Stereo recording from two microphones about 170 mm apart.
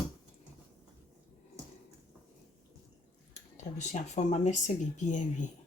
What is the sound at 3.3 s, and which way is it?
Speech, 45° left (ahead or behind).